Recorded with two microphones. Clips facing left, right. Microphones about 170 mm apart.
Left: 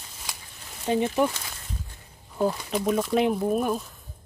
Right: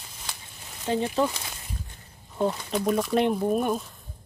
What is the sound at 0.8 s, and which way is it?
Speech, 15° left (ahead or behind).